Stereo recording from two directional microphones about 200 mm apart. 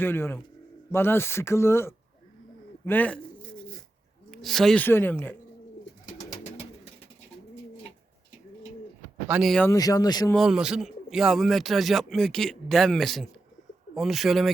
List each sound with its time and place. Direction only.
0.0 s speech: 10° left (ahead or behind)
4.3 s speech: centre (ahead or behind)
9.2 s a man's voice: 5° right (ahead or behind)
9.6 s speech: 15° left (ahead or behind)
10.3 s a man's voice: centre (ahead or behind)